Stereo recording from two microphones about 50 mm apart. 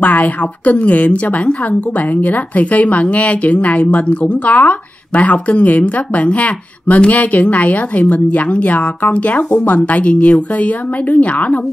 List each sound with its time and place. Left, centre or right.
0.0 s a woman's voice: left